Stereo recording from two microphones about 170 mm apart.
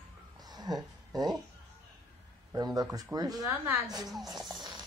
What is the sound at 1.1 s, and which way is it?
Speech, 25° right (ahead or behind).